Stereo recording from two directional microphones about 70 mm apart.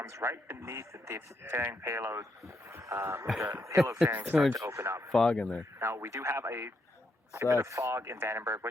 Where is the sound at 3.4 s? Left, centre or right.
Right.